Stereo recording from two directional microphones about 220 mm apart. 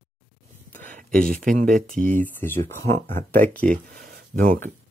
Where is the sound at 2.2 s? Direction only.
10° left (ahead or behind).